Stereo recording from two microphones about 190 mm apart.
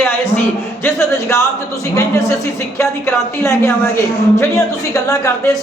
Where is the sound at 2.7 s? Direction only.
15° left (ahead or behind).